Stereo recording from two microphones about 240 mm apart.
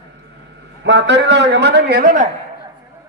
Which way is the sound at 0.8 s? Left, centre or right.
Right.